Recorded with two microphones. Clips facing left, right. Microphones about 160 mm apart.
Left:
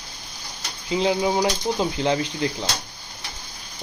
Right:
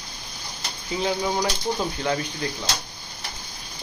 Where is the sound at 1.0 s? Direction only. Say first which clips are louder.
Left 3 dB; 20° left (ahead or behind).